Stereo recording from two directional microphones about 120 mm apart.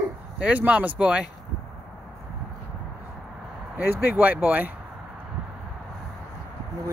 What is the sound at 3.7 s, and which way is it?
Speech, 15° right (ahead or behind).